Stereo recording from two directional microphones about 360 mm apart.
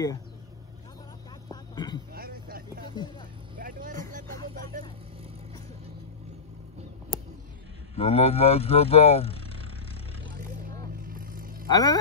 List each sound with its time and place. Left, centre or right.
1.5 s a sound: centre
2.1 s vehicle: right
7.9 s speech: centre
11.1 s vehicle: right
11.6 s speech: centre